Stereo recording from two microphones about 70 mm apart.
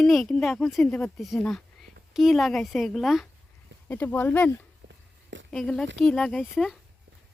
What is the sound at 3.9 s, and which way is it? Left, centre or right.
Speech, left.